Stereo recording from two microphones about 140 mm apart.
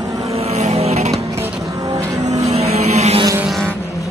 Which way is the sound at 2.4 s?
50° right (ahead or behind).